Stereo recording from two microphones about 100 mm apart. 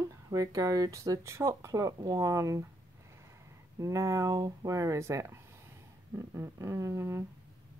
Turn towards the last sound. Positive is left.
turn(degrees=-30)  # may be behind; listen again after turning